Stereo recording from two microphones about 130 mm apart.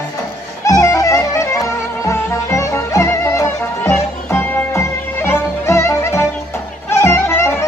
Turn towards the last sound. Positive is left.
turn(degrees=20)  # may be behind; listen again after turning